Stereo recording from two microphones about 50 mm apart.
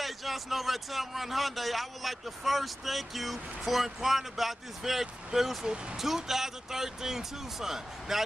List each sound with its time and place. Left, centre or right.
0.0 s a man's voice: centre